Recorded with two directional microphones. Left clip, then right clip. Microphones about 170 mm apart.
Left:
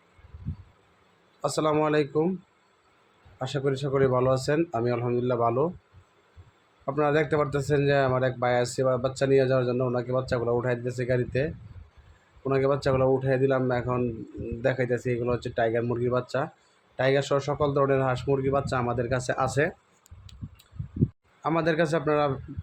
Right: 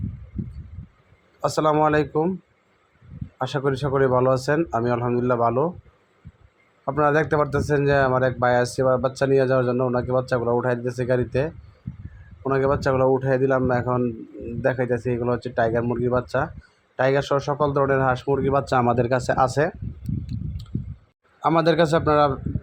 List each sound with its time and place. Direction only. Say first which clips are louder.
1.4 s speech: right 5 dB; 15° right (ahead or behind)
3.3 s speech: right 4 dB; 15° right (ahead or behind)
6.8 s speech: right 4 dB; 15° right (ahead or behind)
21.4 s a man's voice: right 6 dB; 25° right (ahead or behind)